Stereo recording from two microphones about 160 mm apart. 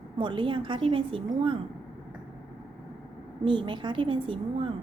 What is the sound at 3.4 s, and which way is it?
A woman's voice, 30° right (ahead or behind).